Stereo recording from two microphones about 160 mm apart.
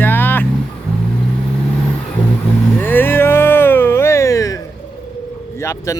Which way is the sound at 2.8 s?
10° left (ahead or behind).